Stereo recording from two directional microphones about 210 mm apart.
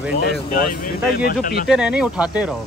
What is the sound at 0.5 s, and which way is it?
Speech, 45° left (ahead or behind).